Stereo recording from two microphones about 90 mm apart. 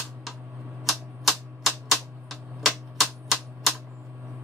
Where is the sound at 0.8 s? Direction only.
Centre (ahead or behind).